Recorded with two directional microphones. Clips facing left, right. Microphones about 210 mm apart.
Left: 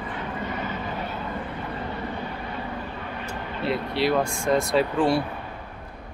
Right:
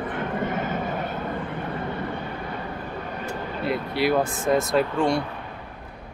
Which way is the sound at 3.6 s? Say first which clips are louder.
Even; centre (ahead or behind).